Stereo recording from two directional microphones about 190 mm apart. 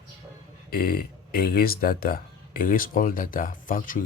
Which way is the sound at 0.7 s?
50° left (ahead or behind).